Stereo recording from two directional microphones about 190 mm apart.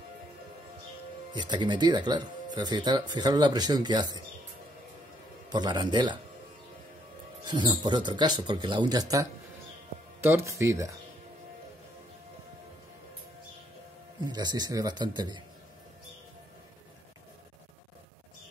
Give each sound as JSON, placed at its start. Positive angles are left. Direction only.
{"t": 1.3, "sound": "speech", "side_deg": -25}
{"t": 5.5, "sound": "speech", "side_deg": -20}
{"t": 7.4, "sound": "speech", "side_deg": -25}
{"t": 14.2, "sound": "speech", "side_deg": -20}